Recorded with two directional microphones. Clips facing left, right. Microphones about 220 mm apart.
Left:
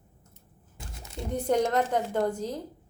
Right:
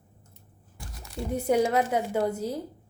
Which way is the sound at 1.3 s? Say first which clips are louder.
Right 1 dB; 10° right (ahead or behind).